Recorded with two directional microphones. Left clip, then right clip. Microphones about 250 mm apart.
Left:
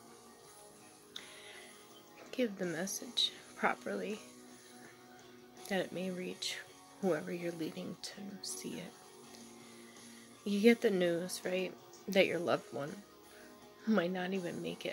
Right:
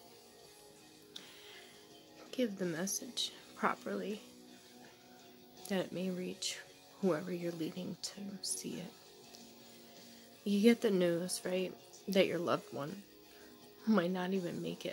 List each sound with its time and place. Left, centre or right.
2.3 s speech: centre
5.7 s speech: centre
10.4 s speech: centre